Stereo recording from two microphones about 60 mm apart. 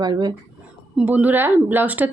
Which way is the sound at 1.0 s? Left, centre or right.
Right.